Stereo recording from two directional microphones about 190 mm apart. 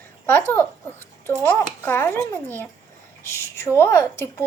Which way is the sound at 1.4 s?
10° left (ahead or behind).